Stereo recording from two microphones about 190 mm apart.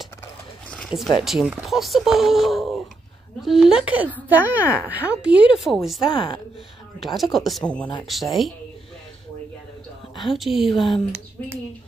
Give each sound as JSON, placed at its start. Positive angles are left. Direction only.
{"t": 0.7, "sound": "a sound", "side_deg": 0}
{"t": 1.2, "sound": "a woman's voice", "side_deg": -5}
{"t": 6.1, "sound": "speech", "side_deg": 25}
{"t": 7.0, "sound": "speech", "side_deg": 0}
{"t": 10.2, "sound": "speech", "side_deg": 0}